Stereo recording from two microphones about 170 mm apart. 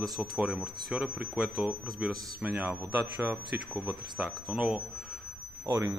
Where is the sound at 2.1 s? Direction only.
20° right (ahead or behind).